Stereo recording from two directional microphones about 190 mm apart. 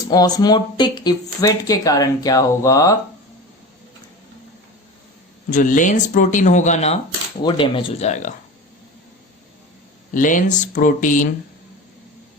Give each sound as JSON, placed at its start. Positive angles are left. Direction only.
{"t": 0.1, "sound": "speech", "side_deg": 20}
{"t": 5.5, "sound": "speech", "side_deg": 40}
{"t": 10.2, "sound": "speech", "side_deg": 45}